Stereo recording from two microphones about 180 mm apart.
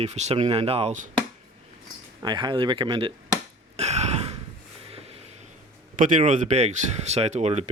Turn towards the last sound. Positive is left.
turn(degrees=-35)  # may be behind; listen again after turning